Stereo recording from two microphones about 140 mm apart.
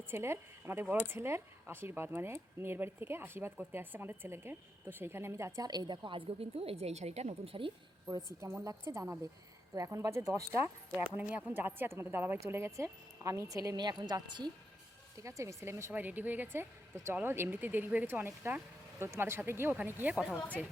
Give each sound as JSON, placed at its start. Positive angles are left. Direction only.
{"t": 0.1, "sound": "speech", "side_deg": -15}
{"t": 8.1, "sound": "speech", "side_deg": -20}
{"t": 15.2, "sound": "speech", "side_deg": -20}